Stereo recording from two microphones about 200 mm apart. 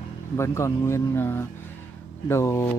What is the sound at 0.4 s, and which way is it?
Speech, 15° left (ahead or behind).